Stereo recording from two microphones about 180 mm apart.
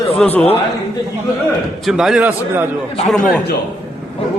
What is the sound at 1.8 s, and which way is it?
Speech, centre (ahead or behind).